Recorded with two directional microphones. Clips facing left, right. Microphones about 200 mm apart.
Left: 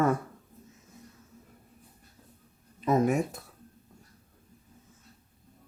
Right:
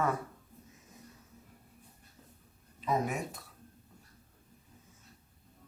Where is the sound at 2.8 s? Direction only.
50° left (ahead or behind).